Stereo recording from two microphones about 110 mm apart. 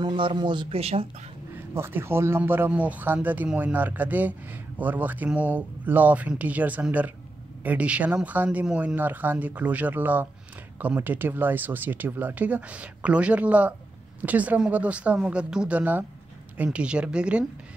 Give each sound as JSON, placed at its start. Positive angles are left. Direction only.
{"t": 0.0, "sound": "a man's voice", "side_deg": -50}
{"t": 0.7, "sound": "speech", "side_deg": -65}
{"t": 1.7, "sound": "a man's voice", "side_deg": -20}